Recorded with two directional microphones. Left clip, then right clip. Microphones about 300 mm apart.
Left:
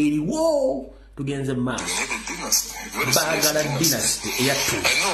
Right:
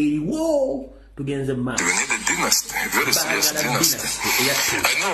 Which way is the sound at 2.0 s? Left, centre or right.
Right.